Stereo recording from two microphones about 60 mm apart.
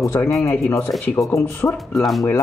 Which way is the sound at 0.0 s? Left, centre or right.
Left.